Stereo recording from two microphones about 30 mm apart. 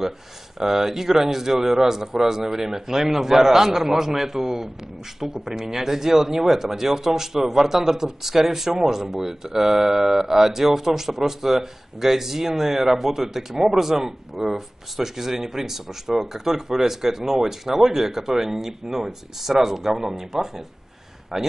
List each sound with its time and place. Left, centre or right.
0.6 s speech: centre
21.3 s a man's voice: right